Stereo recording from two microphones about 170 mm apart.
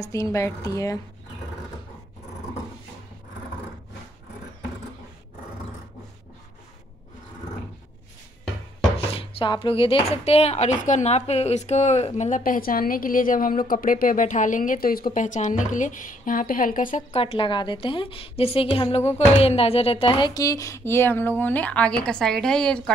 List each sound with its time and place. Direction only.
0.1 s speech: 15° left (ahead or behind)
8.9 s speech: 35° left (ahead or behind); by 17.0 s 55° left (ahead or behind)
17.1 s a woman's voice: 35° left (ahead or behind); by 22.9 s 5° left (ahead or behind)